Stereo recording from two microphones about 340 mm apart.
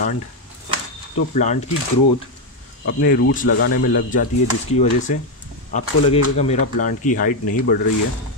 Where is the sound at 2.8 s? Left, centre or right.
Left.